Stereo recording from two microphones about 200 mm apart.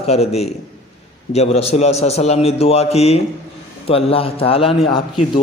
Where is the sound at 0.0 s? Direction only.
30° left (ahead or behind).